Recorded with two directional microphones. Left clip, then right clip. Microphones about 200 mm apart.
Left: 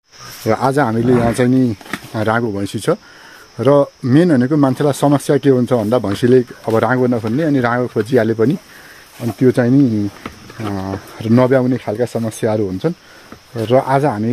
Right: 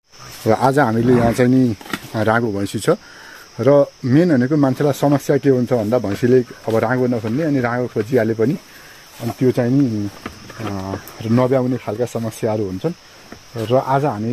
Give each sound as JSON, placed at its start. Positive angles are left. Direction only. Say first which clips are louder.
{"t": 0.5, "sound": "speech", "louder": "even", "side_deg": 0}